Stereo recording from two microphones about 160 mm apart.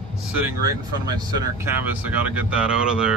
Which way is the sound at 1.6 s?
10° right (ahead or behind).